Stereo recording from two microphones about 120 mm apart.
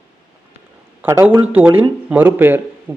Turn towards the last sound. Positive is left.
turn(degrees=-15)  # may be behind; listen again after turning